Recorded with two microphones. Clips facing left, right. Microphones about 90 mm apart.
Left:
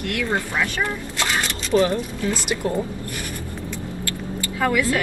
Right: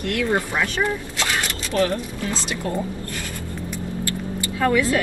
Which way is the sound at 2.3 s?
25° right (ahead or behind).